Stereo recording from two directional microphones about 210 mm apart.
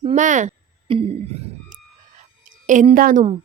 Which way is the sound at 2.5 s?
40° right (ahead or behind).